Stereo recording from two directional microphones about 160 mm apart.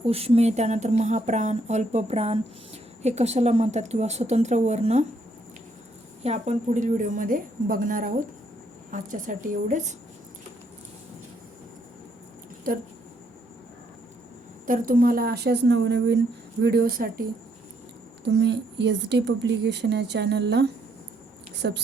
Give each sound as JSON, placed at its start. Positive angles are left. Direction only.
{"t": 0.0, "sound": "speech", "side_deg": -35}
{"t": 6.2, "sound": "a woman's voice", "side_deg": -45}
{"t": 14.7, "sound": "speech", "side_deg": -60}
{"t": 18.3, "sound": "speech", "side_deg": -90}